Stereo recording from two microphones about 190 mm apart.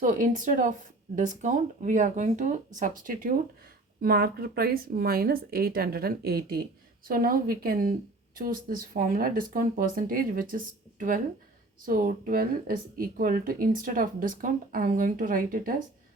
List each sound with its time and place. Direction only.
0.0 s speech: 40° right (ahead or behind)
11.9 s speech: 45° right (ahead or behind)